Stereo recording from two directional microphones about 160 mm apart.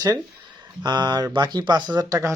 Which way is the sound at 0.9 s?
25° right (ahead or behind).